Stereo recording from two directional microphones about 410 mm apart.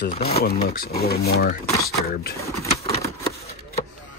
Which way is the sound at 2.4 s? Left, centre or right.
Centre.